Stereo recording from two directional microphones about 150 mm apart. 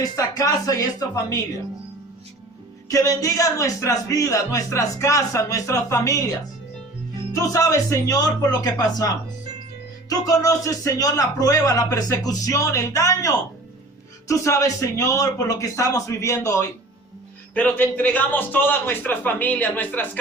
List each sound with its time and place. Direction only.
0.0 s speech: 20° left (ahead or behind)
2.9 s speech: 25° left (ahead or behind)
7.5 s a man's voice: 20° left (ahead or behind)